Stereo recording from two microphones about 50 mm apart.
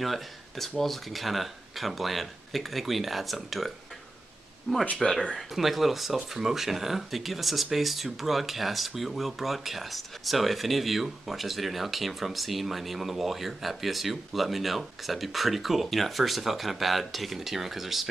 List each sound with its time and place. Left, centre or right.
0.0 s speech: centre
4.7 s speech: centre
5.5 s speech: centre